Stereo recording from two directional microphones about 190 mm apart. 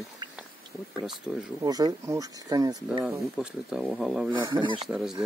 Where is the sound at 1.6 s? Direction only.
20° right (ahead or behind).